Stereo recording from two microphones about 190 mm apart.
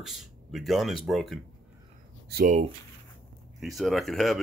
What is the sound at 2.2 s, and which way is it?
Speech, 55° right (ahead or behind).